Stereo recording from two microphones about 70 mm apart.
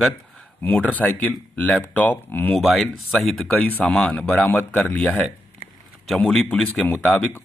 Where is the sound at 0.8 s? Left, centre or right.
Left.